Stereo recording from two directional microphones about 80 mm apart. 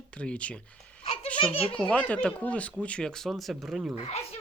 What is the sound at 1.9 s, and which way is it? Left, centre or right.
Speech, centre.